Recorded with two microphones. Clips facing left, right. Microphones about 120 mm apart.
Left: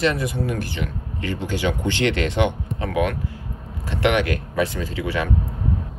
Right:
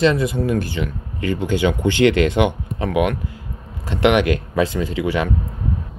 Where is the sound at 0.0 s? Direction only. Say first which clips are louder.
Right 5 dB; 25° right (ahead or behind).